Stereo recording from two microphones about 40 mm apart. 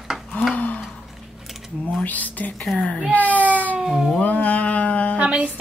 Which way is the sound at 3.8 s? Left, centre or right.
Centre.